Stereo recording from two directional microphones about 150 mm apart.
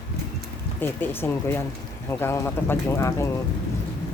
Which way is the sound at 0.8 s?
15° left (ahead or behind).